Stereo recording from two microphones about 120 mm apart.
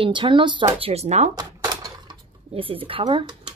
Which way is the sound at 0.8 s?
60° right (ahead or behind).